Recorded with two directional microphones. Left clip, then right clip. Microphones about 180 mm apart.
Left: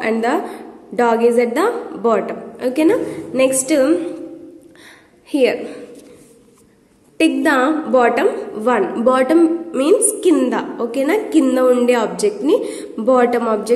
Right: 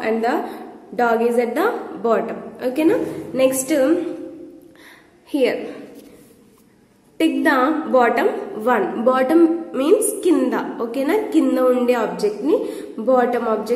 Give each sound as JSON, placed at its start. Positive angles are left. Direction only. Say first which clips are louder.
{"t": 0.0, "sound": "a woman's voice", "louder": "left 2 dB", "side_deg": 25}
{"t": 5.3, "sound": "a woman's voice", "louder": "left 3 dB", "side_deg": 20}
{"t": 7.2, "sound": "a woman's voice", "louder": "left 2 dB", "side_deg": 20}